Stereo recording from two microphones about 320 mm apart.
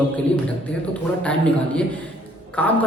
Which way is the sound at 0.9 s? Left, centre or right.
Centre.